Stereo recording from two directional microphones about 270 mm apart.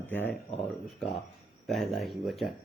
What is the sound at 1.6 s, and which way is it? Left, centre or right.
Speech, centre.